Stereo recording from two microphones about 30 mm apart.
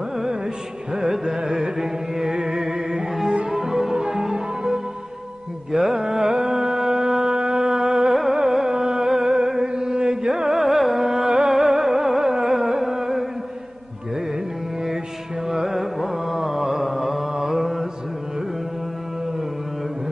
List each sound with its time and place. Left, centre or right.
0.9 s carnatic music: centre
1.8 s music: centre
5.7 s music: centre
8.1 s music: centre
8.6 s music: right
10.3 s carnatic music: centre
11.2 s music: right
11.5 s music: centre
12.2 s carnatic music: right
15.4 s carnatic music: centre